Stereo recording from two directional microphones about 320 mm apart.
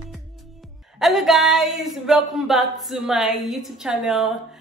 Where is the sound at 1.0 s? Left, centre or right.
Centre.